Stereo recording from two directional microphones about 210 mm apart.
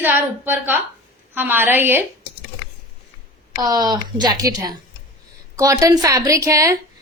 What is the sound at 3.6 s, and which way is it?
A woman's voice, 15° right (ahead or behind).